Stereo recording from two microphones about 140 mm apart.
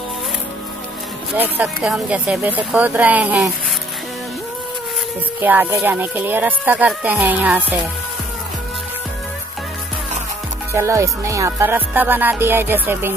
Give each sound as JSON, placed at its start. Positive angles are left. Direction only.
{"t": 1.3, "sound": "music", "side_deg": -10}
{"t": 5.4, "sound": "music", "side_deg": -15}
{"t": 10.7, "sound": "music", "side_deg": -20}